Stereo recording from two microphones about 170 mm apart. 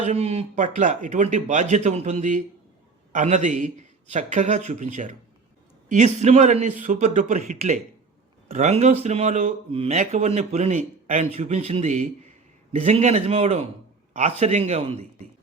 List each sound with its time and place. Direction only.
0.0 s speech: 40° right (ahead or behind)